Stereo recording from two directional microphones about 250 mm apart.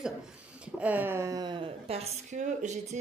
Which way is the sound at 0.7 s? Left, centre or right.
Centre.